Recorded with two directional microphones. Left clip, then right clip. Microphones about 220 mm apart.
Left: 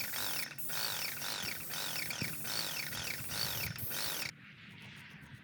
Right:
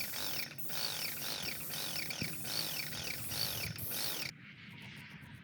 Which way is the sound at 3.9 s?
20° left (ahead or behind).